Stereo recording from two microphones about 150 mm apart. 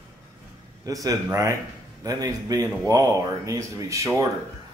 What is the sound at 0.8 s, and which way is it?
Speech, 20° right (ahead or behind).